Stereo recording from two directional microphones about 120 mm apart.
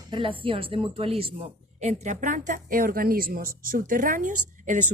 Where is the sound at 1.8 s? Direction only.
70° right (ahead or behind); by 2.6 s 90° right.